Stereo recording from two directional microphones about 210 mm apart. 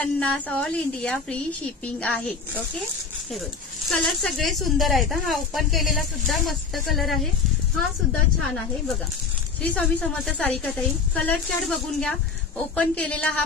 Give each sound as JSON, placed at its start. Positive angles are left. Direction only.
{"t": 0.0, "sound": "speech", "side_deg": 5}
{"t": 3.9, "sound": "speech", "side_deg": 0}
{"t": 9.6, "sound": "a woman's voice", "side_deg": 5}